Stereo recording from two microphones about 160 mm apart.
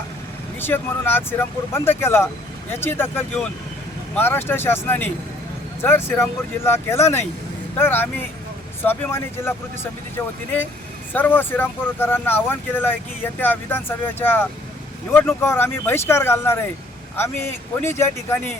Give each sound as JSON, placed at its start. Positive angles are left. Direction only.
{"t": 0.6, "sound": "speech", "side_deg": 15}
{"t": 11.1, "sound": "speech", "side_deg": 10}